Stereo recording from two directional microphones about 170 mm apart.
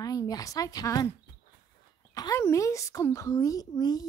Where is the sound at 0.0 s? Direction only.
20° left (ahead or behind).